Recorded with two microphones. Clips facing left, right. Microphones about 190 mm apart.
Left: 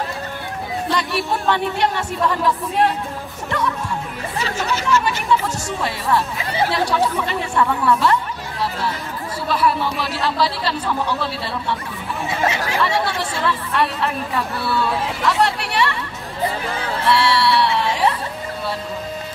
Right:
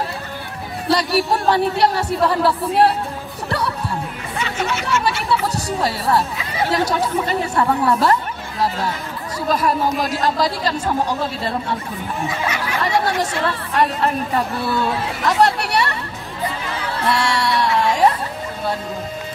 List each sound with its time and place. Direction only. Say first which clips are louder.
0.8 s speech: right 6 dB; 40° right (ahead or behind)
4.4 s speech: even; 35° left (ahead or behind)
4.8 s music: left 3 dB; 35° right (ahead or behind)
6.7 s speech: right 3 dB; 40° right (ahead or behind)
9.5 s speech: right 1 dB; 45° right (ahead or behind)
13.2 s speech: right 1 dB; 45° right (ahead or behind)
15.2 s chatter: right 3 dB; 45° right (ahead or behind)
17.1 s a sound: left 3 dB; 45° right (ahead or behind)